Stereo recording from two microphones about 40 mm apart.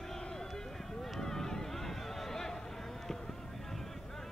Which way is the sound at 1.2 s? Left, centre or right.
Centre.